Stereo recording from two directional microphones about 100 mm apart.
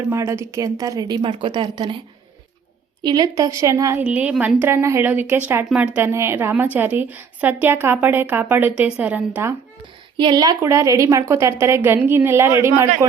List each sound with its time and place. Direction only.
0.1 s a woman's voice: 30° right (ahead or behind); by 2.0 s 45° right (ahead or behind)
3.0 s a woman's voice: 40° right (ahead or behind)
3.9 s a woman's voice: 10° right (ahead or behind)
6.1 s a woman's voice: 25° right (ahead or behind)
10.2 s a woman's voice: 45° right (ahead or behind)
10.6 s a woman's voice: 30° right (ahead or behind)